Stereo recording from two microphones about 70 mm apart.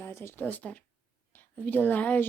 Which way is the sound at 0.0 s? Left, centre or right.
Left.